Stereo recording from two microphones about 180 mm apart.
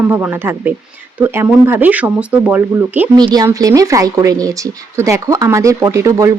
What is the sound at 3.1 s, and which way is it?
Speech, 20° right (ahead or behind).